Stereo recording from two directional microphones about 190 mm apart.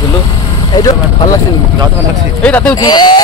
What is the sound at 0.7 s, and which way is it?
Speech, 20° left (ahead or behind).